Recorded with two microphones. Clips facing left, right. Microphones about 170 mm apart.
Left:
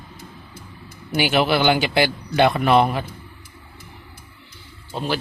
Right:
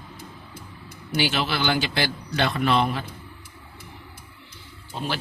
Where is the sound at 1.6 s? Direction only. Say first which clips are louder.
Left 6 dB; 15° left (ahead or behind).